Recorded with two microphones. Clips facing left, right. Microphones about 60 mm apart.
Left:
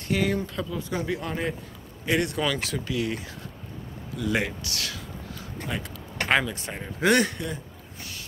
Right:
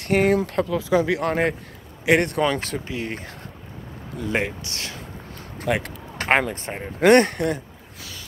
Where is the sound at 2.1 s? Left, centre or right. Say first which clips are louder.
Right 6 dB; right.